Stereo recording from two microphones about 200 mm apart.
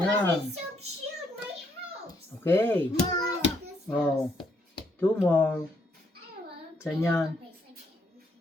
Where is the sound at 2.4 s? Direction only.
10° left (ahead or behind).